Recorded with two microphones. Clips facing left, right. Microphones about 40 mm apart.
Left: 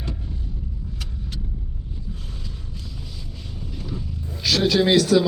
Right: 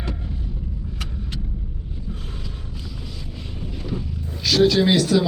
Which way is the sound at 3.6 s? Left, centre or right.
Right.